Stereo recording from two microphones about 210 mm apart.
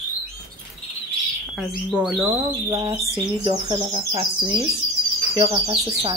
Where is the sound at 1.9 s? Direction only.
5° right (ahead or behind).